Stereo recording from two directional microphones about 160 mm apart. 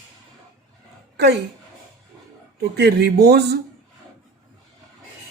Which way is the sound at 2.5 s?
85° right.